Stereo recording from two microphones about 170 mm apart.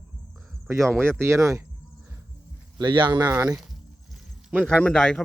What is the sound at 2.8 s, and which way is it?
Speech, 30° right (ahead or behind).